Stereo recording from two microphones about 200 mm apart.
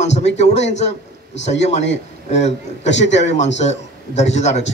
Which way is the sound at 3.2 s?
35° left (ahead or behind).